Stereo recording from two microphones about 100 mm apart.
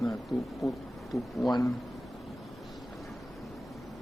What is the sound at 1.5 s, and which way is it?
Speech, 40° left (ahead or behind).